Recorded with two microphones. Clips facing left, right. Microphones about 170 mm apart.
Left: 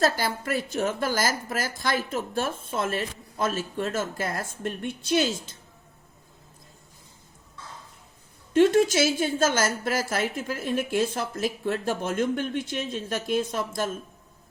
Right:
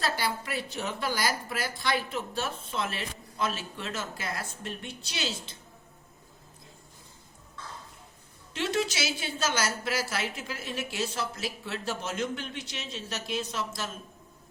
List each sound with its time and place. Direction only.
0.0 s a woman's voice: 45° left (ahead or behind)
8.5 s a woman's voice: 50° left (ahead or behind)